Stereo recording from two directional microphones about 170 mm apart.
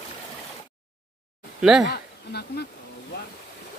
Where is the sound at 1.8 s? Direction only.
75° left (ahead or behind).